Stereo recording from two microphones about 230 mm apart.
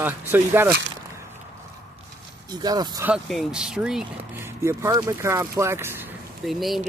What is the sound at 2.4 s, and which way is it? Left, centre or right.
Speech, centre.